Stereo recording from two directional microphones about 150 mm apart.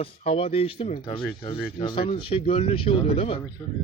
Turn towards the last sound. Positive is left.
turn(degrees=35)  # may be behind; listen again after turning